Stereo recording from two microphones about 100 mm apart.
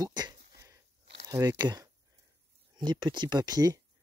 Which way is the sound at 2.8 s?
45° right (ahead or behind).